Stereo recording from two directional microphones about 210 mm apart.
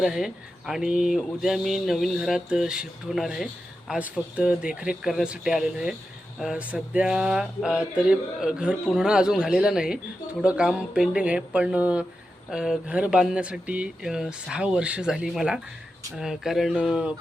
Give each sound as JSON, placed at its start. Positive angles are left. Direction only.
{"t": 0.0, "sound": "speech", "side_deg": 0}